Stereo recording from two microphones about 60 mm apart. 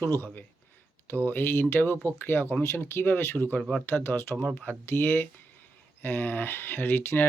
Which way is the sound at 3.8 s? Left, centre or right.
Left.